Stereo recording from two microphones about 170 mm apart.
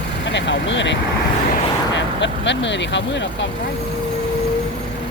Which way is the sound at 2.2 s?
90° left.